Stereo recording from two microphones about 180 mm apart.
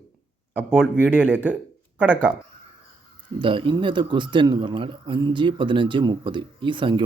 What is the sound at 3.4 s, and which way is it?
A man's voice, 30° right (ahead or behind).